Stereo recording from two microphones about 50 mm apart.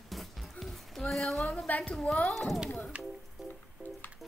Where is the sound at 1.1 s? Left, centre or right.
Centre.